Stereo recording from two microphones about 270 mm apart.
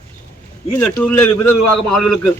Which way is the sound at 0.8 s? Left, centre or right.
Centre.